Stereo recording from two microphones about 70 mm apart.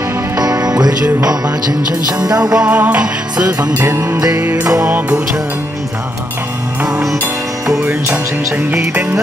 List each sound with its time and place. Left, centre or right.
0.4 s music: right
2.5 s music: right